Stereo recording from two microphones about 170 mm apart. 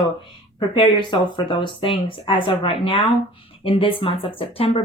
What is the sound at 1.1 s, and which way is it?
Speech, 30° left (ahead or behind).